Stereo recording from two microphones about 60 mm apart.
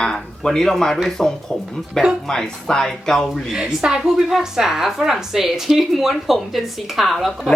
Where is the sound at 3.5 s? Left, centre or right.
Centre.